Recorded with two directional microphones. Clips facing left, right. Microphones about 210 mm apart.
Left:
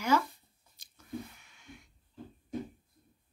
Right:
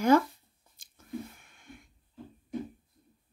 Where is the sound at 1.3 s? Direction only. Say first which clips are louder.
Right 2 dB; 50° right (ahead or behind).